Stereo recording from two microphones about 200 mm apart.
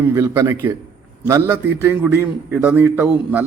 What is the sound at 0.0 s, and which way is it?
A man's voice, 15° right (ahead or behind).